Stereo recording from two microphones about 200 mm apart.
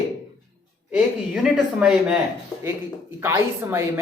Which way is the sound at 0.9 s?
5° right (ahead or behind).